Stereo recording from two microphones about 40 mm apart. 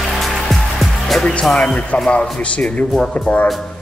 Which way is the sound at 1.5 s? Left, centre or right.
Centre.